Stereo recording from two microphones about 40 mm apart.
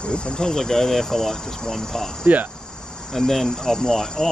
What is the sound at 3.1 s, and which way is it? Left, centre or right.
Speech, centre.